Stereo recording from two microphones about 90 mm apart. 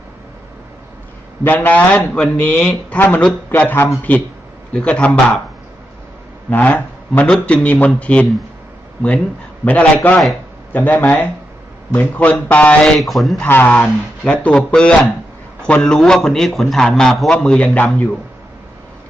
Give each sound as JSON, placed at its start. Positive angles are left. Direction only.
{"t": 1.5, "sound": "a man's voice", "side_deg": 20}
{"t": 6.5, "sound": "a man's voice", "side_deg": 15}
{"t": 12.8, "sound": "a man's voice", "side_deg": 0}
{"t": 13.5, "sound": "a man's voice", "side_deg": 20}